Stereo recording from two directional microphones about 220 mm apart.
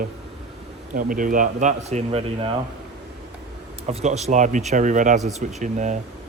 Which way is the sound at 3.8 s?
30° right (ahead or behind).